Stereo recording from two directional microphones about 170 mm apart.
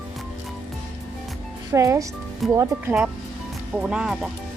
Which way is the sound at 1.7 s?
20° right (ahead or behind).